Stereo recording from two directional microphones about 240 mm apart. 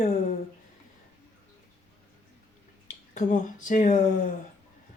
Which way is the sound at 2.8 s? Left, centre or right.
Left.